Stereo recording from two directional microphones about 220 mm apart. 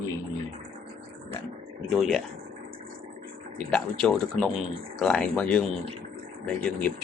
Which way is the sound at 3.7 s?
5° left (ahead or behind).